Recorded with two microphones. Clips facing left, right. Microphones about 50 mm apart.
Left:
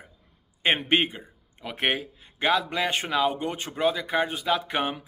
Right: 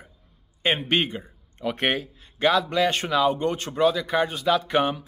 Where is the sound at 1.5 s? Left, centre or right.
Centre.